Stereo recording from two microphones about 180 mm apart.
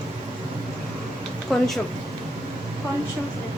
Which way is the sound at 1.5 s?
Centre (ahead or behind).